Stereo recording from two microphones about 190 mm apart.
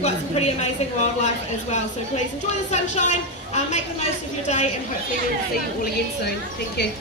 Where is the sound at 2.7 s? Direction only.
35° left (ahead or behind).